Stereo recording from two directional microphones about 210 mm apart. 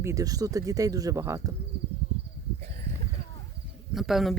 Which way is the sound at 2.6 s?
30° right (ahead or behind).